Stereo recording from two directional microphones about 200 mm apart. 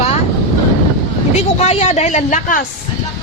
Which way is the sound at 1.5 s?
35° left (ahead or behind).